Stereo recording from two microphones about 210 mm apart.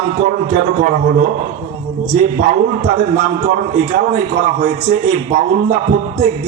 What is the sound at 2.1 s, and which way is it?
A man's voice, 35° right (ahead or behind).